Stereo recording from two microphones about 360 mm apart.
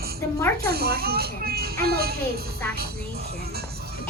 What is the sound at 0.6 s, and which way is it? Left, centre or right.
A child's voice, right.